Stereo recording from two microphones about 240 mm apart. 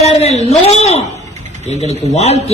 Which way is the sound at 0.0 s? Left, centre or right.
Left.